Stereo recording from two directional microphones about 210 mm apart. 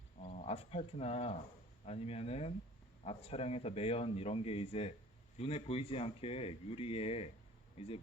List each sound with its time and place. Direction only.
0.2 s a man's voice: 35° left (ahead or behind)